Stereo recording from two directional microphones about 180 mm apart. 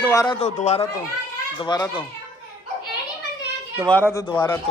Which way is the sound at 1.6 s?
25° left (ahead or behind).